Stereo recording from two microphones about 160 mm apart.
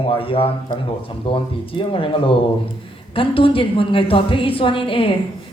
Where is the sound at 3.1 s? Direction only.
35° left (ahead or behind).